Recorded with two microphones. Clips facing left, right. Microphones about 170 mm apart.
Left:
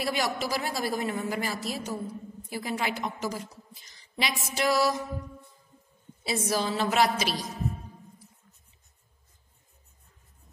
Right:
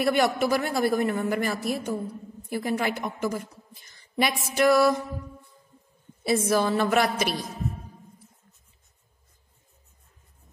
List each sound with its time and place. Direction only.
0.0 s a man's voice: 55° right (ahead or behind)
6.2 s a man's voice: 55° right (ahead or behind)